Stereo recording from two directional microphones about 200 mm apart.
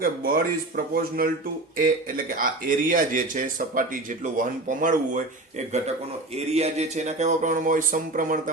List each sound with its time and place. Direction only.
0.0 s speech: 45° right (ahead or behind)